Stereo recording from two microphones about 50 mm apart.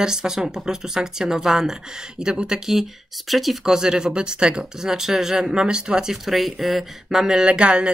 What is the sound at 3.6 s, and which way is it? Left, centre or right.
Speech, centre.